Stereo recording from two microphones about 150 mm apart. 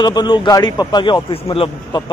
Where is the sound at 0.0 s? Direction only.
30° left (ahead or behind).